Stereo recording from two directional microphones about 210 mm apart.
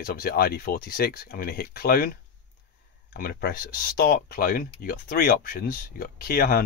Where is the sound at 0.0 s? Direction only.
45° left (ahead or behind).